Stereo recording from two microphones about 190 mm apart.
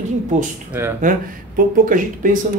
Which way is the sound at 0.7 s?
10° right (ahead or behind).